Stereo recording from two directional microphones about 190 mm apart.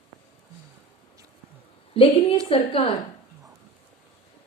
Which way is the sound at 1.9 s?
30° left (ahead or behind).